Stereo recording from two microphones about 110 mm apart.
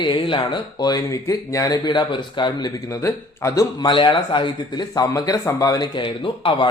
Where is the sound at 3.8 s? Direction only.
50° left (ahead or behind).